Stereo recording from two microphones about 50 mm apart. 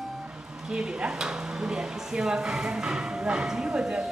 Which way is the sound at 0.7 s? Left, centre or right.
Centre.